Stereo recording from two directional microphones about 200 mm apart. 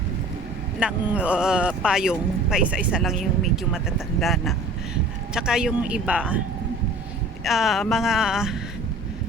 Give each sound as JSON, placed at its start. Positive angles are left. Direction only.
{"t": 0.8, "sound": "speech", "side_deg": -5}
{"t": 7.4, "sound": "speech", "side_deg": 0}